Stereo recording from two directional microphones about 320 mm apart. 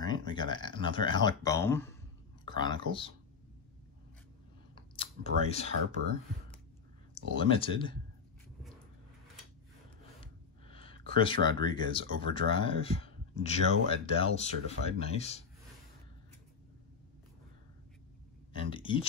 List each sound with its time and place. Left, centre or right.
0.0 s speech: centre
4.7 s a sound: centre
5.5 s speech: centre
7.3 s speech: centre
10.2 s speech: centre
18.7 s speech: centre